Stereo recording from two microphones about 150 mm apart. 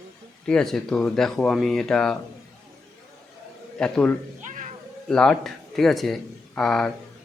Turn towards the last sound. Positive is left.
turn(degrees=5)  # may be behind; listen again after turning